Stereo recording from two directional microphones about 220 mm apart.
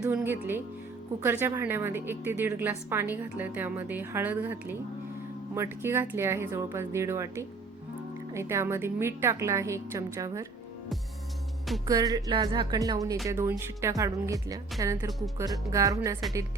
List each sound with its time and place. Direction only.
0.0 s a woman's voice: 10° right (ahead or behind)
11.9 s a woman's voice: 15° right (ahead or behind)